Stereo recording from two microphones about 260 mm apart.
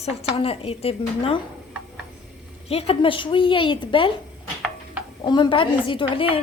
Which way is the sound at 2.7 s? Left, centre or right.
Left.